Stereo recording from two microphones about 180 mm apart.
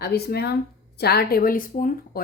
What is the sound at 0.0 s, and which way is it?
Speech, 60° left (ahead or behind).